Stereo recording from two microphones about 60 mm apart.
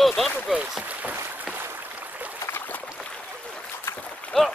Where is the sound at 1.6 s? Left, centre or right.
Right.